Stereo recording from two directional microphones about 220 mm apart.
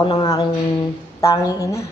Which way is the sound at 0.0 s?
20° left (ahead or behind).